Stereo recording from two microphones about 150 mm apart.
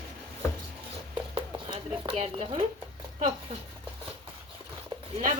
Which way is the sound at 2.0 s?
40° right (ahead or behind).